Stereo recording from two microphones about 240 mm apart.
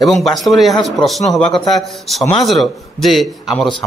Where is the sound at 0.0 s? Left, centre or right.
Centre.